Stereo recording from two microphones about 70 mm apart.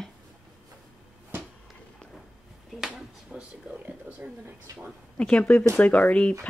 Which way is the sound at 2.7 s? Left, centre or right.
Centre.